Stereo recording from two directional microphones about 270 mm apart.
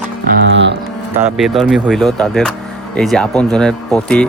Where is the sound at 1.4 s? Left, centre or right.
Centre.